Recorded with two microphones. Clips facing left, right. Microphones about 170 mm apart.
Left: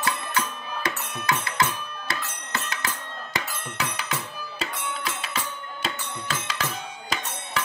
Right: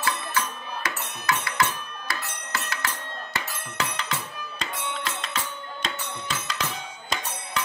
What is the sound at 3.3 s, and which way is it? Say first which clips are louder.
Music: left 1 dB; 10° left (ahead or behind).